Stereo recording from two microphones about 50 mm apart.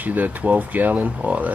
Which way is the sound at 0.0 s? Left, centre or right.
Right.